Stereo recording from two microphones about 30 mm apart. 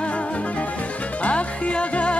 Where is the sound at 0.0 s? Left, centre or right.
Left.